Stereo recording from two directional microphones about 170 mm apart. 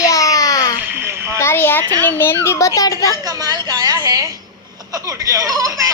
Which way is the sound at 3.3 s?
25° right (ahead or behind).